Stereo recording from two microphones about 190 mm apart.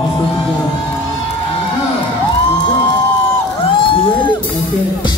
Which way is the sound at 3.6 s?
30° left (ahead or behind).